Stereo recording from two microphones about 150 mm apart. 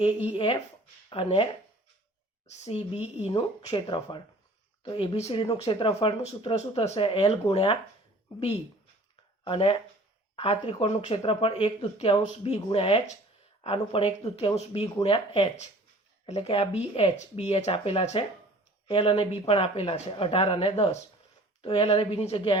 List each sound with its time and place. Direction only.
0.3 s speech: 35° left (ahead or behind)
2.5 s speech: 45° left (ahead or behind)
9.4 s speech: 35° left (ahead or behind)